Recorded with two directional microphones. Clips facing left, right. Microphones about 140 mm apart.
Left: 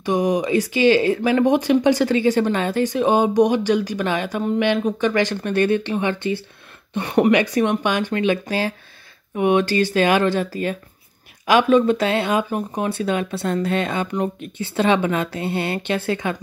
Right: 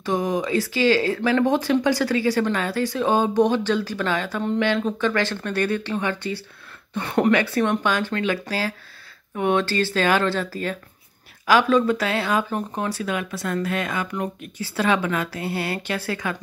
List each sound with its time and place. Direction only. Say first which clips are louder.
0.0 s speech: left 4 dB; 15° left (ahead or behind)
12.9 s speech: left 5 dB; 30° left (ahead or behind)